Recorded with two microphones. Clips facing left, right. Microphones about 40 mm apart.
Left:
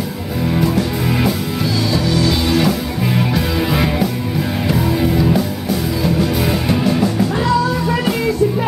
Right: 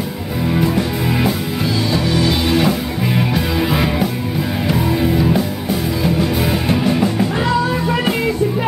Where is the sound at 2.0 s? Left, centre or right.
Centre.